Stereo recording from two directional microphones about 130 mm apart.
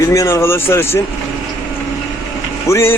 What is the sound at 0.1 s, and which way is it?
Speech, 20° left (ahead or behind).